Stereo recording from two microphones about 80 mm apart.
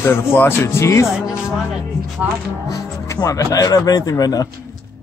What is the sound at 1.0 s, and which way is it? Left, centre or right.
Speech, centre.